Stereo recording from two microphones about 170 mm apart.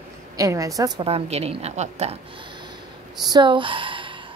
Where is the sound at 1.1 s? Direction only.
35° right (ahead or behind).